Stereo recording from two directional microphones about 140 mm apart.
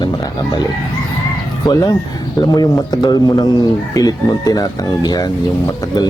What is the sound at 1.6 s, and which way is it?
Speech, 25° left (ahead or behind).